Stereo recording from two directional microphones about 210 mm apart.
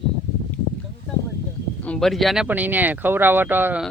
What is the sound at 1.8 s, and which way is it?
Speech, 5° left (ahead or behind).